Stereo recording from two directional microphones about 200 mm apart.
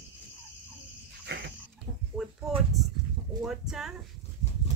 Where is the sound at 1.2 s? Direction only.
60° right (ahead or behind).